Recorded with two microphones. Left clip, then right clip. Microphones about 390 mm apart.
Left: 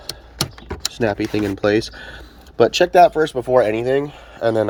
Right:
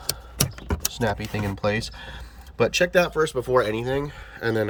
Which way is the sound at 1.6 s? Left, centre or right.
Centre.